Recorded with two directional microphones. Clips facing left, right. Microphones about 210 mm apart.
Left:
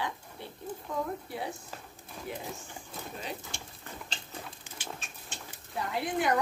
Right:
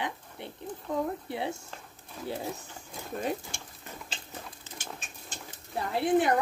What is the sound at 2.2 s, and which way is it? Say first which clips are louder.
Speech: right 4 dB; 5° right (ahead or behind).